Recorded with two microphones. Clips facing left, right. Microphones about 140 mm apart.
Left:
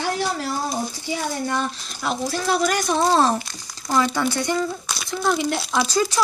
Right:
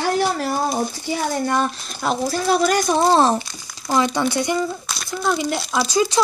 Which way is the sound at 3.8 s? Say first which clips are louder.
Right 2 dB; 15° right (ahead or behind).